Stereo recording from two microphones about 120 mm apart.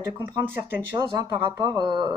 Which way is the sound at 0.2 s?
15° right (ahead or behind).